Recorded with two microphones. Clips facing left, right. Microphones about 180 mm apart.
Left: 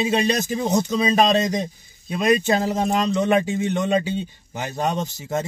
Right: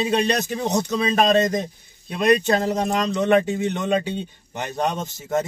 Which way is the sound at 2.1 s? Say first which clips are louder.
Right 1 dB; 5° left (ahead or behind).